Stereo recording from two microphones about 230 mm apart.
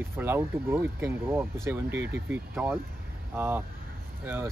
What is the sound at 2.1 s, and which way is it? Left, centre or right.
Speech, centre.